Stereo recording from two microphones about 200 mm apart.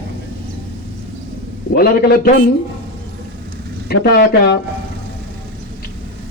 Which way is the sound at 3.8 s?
50° left (ahead or behind).